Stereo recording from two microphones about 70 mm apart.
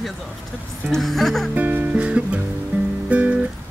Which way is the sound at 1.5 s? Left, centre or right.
Right.